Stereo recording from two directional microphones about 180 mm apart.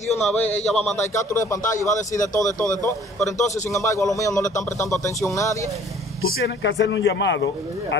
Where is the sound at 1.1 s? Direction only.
15° left (ahead or behind).